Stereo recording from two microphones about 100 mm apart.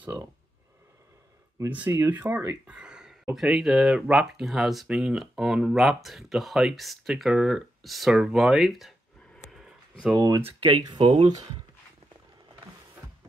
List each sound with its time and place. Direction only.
1.9 s speech: 25° right (ahead or behind); by 8.9 s centre (ahead or behind)
9.5 s a sound: 5° right (ahead or behind)
10.1 s speech: 40° right (ahead or behind)
11.0 s speech: 75° right (ahead or behind)